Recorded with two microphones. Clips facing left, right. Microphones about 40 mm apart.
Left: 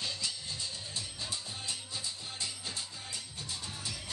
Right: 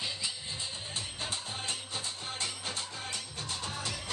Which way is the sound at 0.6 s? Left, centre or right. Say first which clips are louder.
Right 2 dB; right.